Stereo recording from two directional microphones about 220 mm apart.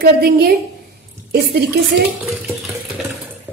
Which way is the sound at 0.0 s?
45° right (ahead or behind).